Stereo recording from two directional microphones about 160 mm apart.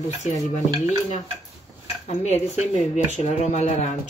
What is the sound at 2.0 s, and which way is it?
Speech, 45° left (ahead or behind).